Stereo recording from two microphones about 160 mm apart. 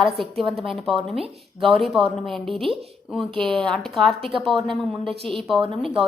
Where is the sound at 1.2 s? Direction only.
35° right (ahead or behind).